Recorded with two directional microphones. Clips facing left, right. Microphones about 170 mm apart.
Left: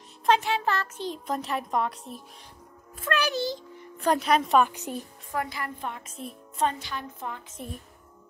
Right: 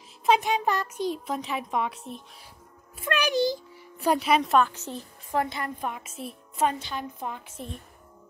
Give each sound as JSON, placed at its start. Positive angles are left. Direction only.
{"t": 0.3, "sound": "a child's voice", "side_deg": -15}
{"t": 3.0, "sound": "a child's voice", "side_deg": -15}
{"t": 4.6, "sound": "a woman's voice", "side_deg": 15}
{"t": 5.3, "sound": "a woman's voice", "side_deg": -25}
{"t": 5.8, "sound": "a woman's voice", "side_deg": -15}
{"t": 6.7, "sound": "a woman's voice", "side_deg": -20}